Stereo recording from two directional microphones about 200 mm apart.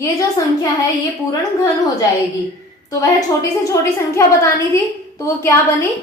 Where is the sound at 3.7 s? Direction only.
15° left (ahead or behind).